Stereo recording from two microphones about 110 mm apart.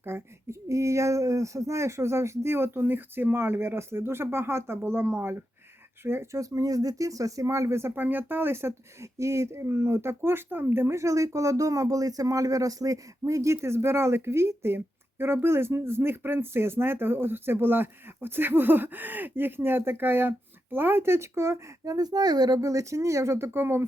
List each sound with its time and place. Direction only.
0.0 s speech: 20° right (ahead or behind)